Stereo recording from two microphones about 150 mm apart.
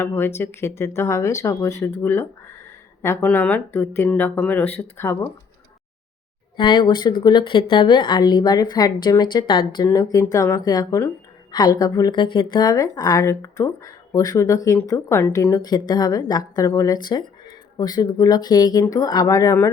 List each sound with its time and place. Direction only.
0.0 s speech: 15° left (ahead or behind)
6.6 s speech: 30° left (ahead or behind)